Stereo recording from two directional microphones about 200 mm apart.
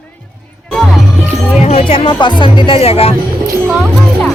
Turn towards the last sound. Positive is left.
turn(degrees=0)  # may be behind; listen again after turning